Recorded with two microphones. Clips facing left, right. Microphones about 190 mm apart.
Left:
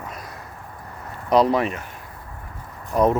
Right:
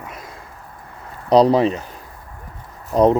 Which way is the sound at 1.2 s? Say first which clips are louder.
Right 5 dB; 35° right (ahead or behind).